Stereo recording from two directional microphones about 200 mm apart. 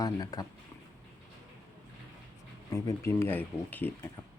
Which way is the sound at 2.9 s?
15° left (ahead or behind).